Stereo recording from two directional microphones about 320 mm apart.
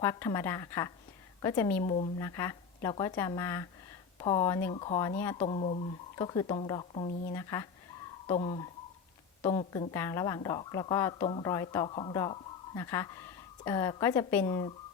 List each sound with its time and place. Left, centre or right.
0.0 s a woman's voice: centre